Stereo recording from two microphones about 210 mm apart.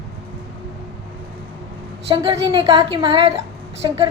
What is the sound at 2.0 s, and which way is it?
A woman's voice, 25° right (ahead or behind).